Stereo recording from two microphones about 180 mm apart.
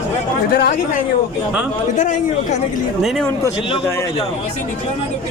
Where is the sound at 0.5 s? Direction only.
55° left (ahead or behind).